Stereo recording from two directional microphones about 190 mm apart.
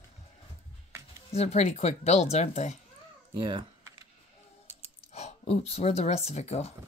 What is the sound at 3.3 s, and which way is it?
Speech, 25° right (ahead or behind).